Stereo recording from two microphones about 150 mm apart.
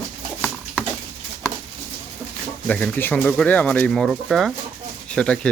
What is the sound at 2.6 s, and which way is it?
Speech, 10° left (ahead or behind).